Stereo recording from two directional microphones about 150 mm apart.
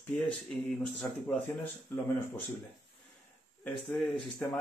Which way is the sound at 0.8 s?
10° left (ahead or behind).